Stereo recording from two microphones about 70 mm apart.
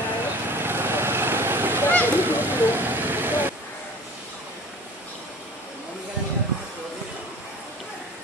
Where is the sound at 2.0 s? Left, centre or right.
Right.